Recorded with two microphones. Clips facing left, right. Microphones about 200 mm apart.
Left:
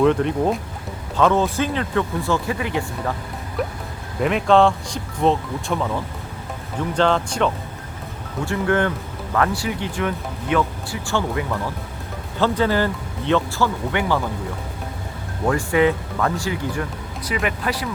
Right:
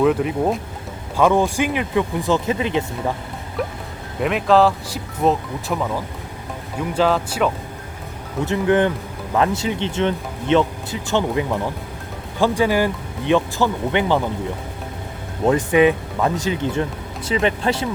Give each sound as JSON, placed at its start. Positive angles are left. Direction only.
{"t": 0.0, "sound": "speech", "side_deg": -5}
{"t": 4.2, "sound": "speech", "side_deg": 0}
{"t": 8.4, "sound": "speech", "side_deg": -20}
{"t": 15.4, "sound": "speech", "side_deg": -20}